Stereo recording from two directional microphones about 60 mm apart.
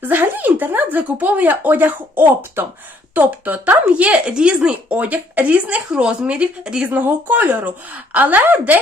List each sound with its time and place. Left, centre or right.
0.0 s speech: right; by 4.7 s centre
4.9 s speech: right
6.9 s speech: right